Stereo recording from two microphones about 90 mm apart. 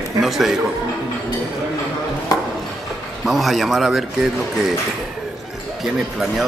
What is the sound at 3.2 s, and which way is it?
Speech, centre (ahead or behind).